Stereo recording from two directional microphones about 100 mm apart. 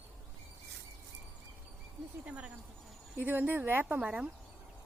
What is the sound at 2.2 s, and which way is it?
Speech, 10° right (ahead or behind).